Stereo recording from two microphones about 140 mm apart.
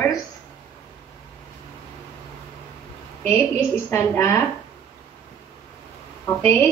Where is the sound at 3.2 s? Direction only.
20° left (ahead or behind).